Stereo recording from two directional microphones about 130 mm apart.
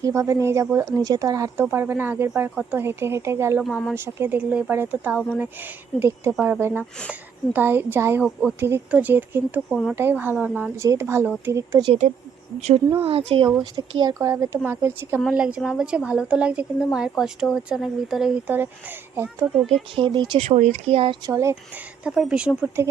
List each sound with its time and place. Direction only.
0.0 s a woman's voice: 25° right (ahead or behind)
3.6 s speech: centre (ahead or behind)
3.9 s a woman's voice: 15° right (ahead or behind)
8.2 s speech: centre (ahead or behind)
8.6 s a woman's voice: 15° right (ahead or behind)
13.0 s speech: 45° right (ahead or behind)
13.6 s speech: 35° right (ahead or behind)
15.2 s a woman's voice: 5° right (ahead or behind)
20.0 s speech: 40° right (ahead or behind)
20.4 s speech: 55° right (ahead or behind)
21.2 s speech: 25° right (ahead or behind)
22.0 s a woman's voice: 5° right (ahead or behind)